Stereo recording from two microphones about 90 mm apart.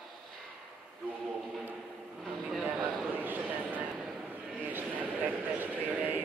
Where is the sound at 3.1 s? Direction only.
20° right (ahead or behind).